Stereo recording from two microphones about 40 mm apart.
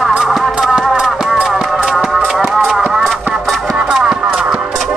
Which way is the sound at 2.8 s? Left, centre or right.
Centre.